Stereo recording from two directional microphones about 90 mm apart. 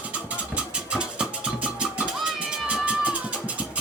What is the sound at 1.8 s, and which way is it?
Music, 10° right (ahead or behind).